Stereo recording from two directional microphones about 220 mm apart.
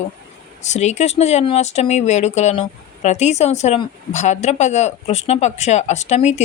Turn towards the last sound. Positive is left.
turn(degrees=30)  # may be behind; listen again after turning